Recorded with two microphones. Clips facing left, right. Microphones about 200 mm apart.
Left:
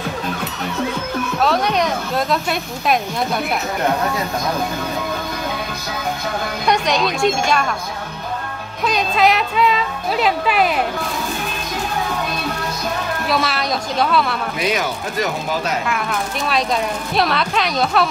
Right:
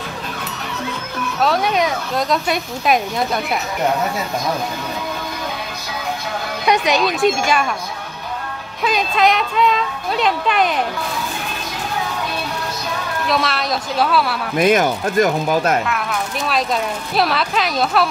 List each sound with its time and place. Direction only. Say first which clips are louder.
1.4 s speech: right 1 dB; centre (ahead or behind)
6.7 s speech: right 2 dB; centre (ahead or behind)
8.8 s speech: even; centre (ahead or behind)
13.3 s speech: right 1 dB; centre (ahead or behind)
14.6 s speech: right 8 dB; 50° right (ahead or behind)
15.9 s speech: even; centre (ahead or behind)